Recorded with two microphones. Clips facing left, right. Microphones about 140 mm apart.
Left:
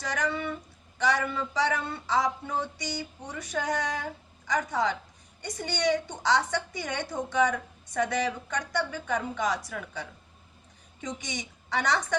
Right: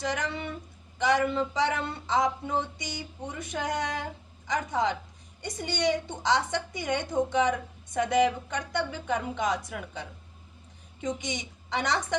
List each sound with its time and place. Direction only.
0.0 s speech: 20° right (ahead or behind)